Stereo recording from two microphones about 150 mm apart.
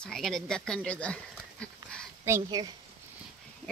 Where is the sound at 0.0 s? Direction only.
Centre (ahead or behind).